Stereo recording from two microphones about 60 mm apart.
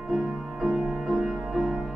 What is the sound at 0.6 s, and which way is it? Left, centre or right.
Music, centre.